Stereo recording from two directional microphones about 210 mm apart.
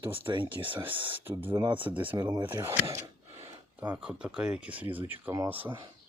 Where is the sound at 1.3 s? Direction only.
10° right (ahead or behind).